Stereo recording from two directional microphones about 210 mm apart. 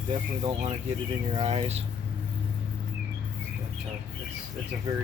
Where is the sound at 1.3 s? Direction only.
30° right (ahead or behind).